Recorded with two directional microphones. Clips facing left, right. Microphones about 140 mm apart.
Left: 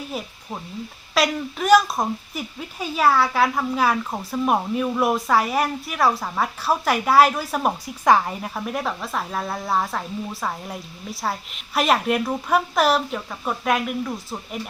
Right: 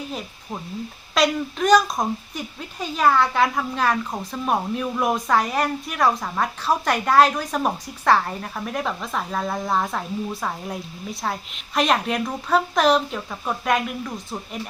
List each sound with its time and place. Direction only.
1.1 s speech: 5° left (ahead or behind)